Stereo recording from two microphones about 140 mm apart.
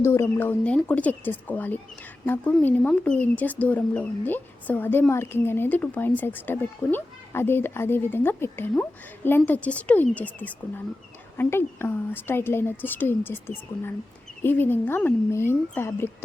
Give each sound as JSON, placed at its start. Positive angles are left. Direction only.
{"t": 0.0, "sound": "speech", "side_deg": 20}